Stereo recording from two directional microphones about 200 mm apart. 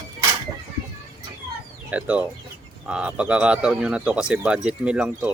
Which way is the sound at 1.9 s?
5° right (ahead or behind).